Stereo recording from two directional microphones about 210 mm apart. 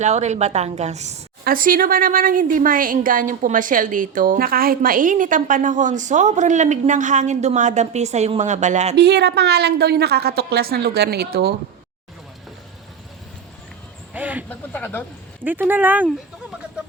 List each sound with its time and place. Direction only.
0.0 s a woman's voice: 35° right (ahead or behind)
9.0 s a woman's voice: 50° right (ahead or behind)
14.1 s a sound: 10° right (ahead or behind)
14.5 s speech: 10° left (ahead or behind)
15.4 s speech: 10° right (ahead or behind)